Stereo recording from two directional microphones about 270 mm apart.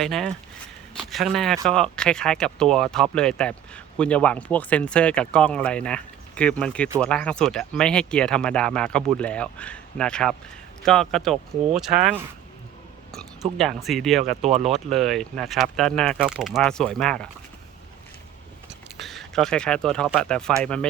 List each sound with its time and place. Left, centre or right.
0.0 s speech: centre
18.7 s speech: centre